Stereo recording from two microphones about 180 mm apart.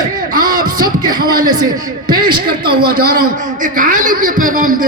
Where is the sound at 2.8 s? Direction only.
55° right (ahead or behind).